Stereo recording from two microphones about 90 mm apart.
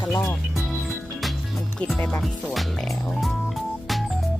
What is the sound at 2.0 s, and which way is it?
Speech, 15° left (ahead or behind).